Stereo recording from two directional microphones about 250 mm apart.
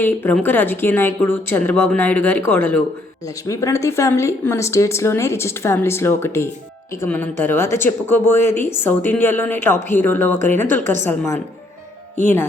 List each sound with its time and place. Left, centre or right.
0.0 s speech: centre